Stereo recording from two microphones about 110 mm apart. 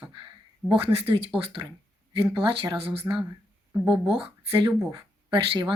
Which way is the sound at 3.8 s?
5° right (ahead or behind).